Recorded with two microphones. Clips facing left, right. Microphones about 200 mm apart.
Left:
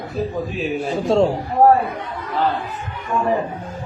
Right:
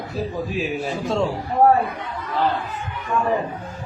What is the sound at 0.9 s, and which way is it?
Speech, 35° left (ahead or behind).